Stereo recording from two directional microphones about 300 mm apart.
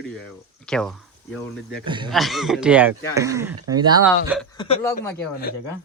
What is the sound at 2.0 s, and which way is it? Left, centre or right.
Speech, centre.